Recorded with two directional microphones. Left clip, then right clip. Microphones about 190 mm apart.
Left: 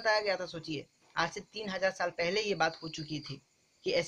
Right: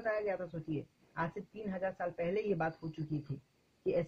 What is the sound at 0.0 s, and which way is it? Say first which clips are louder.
Speech: left 6 dB; 25° left (ahead or behind).